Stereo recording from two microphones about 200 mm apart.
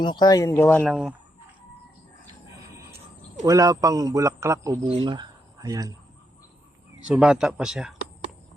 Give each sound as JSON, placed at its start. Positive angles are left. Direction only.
{"t": 0.0, "sound": "speech", "side_deg": 20}
{"t": 0.9, "sound": "speech", "side_deg": -5}
{"t": 3.4, "sound": "a man's voice", "side_deg": -15}
{"t": 7.1, "sound": "speech", "side_deg": -5}